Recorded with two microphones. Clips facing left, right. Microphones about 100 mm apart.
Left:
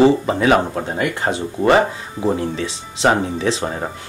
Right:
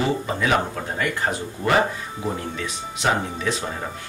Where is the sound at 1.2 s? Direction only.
25° left (ahead or behind).